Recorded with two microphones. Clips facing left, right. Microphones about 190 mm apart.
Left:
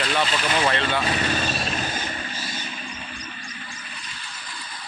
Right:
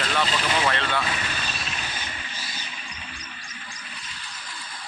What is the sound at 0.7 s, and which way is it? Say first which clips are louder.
Speech: left 2 dB; 15° left (ahead or behind).